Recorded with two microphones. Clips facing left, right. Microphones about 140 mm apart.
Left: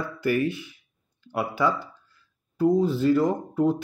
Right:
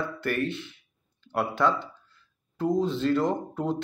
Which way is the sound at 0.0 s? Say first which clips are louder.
Left 4 dB; 10° left (ahead or behind).